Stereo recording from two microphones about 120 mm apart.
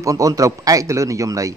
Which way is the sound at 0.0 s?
30° right (ahead or behind).